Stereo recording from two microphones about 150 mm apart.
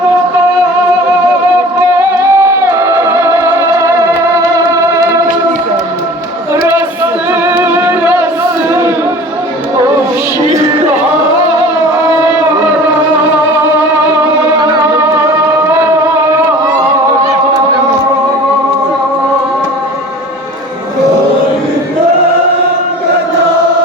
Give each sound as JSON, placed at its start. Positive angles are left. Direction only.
{"t": 2.0, "sound": "music", "side_deg": -20}
{"t": 7.4, "sound": "music", "side_deg": -15}